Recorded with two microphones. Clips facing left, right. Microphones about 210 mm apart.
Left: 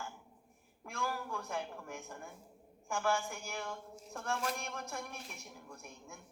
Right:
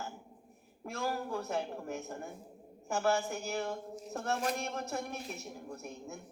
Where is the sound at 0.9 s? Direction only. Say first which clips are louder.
Right 4 dB; 35° right (ahead or behind).